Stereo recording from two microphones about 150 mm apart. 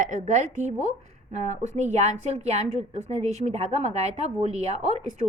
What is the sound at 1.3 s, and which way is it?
A woman's voice, 50° right (ahead or behind).